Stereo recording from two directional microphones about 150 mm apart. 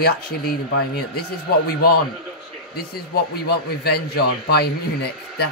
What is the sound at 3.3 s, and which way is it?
Speech, 90° left.